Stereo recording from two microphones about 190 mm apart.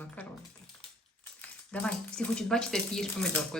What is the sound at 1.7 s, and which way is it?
A child's voice, 5° left (ahead or behind).